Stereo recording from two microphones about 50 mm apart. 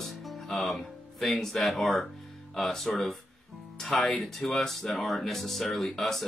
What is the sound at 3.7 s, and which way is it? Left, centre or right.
Speech, left.